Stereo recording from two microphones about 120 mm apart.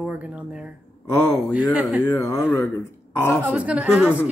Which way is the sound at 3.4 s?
10° right (ahead or behind).